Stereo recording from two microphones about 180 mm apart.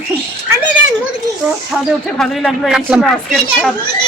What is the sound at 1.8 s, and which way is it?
Speech, centre (ahead or behind).